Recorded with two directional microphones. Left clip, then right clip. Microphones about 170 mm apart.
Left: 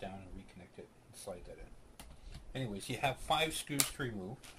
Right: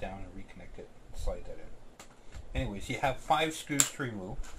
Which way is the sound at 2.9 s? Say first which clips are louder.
Right 5 dB; 35° left (ahead or behind).